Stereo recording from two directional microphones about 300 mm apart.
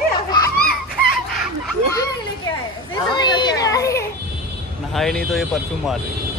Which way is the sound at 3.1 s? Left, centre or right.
Centre.